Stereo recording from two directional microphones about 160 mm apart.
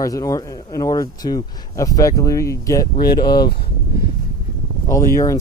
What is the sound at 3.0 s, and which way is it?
Speech, 75° left (ahead or behind).